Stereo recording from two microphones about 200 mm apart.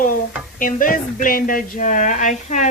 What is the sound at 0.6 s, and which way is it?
Speech, 45° left (ahead or behind).